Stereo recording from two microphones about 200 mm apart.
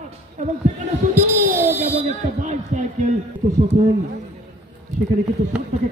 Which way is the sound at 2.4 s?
35° right (ahead or behind).